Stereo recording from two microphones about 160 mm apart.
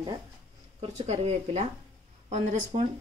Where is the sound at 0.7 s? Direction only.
40° right (ahead or behind).